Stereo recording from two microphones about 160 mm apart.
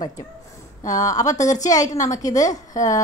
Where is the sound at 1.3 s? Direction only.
50° left (ahead or behind).